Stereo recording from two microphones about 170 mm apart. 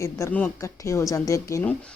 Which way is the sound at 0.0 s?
15° left (ahead or behind).